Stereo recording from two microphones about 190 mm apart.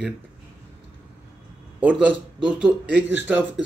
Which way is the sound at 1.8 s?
5° right (ahead or behind).